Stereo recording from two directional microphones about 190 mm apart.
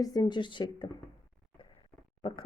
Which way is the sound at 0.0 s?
20° left (ahead or behind).